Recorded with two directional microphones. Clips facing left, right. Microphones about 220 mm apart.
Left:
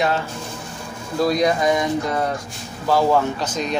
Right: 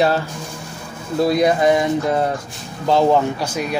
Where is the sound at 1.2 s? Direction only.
25° right (ahead or behind).